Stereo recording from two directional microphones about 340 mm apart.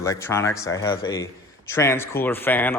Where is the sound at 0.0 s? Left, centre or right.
Centre.